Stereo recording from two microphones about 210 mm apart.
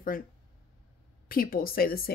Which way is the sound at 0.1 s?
40° left (ahead or behind).